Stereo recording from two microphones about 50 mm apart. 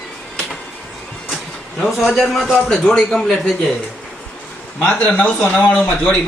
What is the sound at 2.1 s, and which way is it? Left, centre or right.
Speech, centre.